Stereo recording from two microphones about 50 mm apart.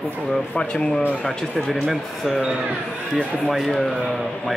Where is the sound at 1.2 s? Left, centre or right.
Centre.